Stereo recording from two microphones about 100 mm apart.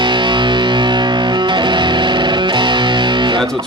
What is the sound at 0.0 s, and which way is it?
Music, 50° right (ahead or behind).